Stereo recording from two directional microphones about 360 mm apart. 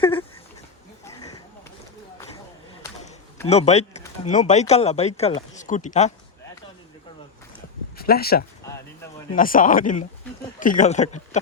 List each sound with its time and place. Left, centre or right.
0.0 s dog: centre
2.8 s speech: centre
7.9 s speech: left